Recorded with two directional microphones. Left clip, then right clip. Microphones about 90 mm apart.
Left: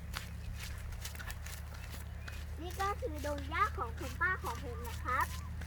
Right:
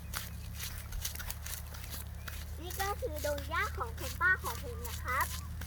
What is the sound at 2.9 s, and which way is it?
A child's voice, 40° right (ahead or behind).